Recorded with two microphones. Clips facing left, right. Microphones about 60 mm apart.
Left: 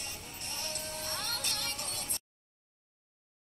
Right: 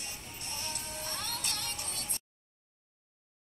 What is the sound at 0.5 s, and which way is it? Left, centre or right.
Music, left.